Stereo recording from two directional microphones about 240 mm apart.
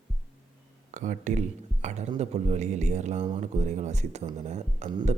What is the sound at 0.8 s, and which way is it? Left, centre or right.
Speech, right.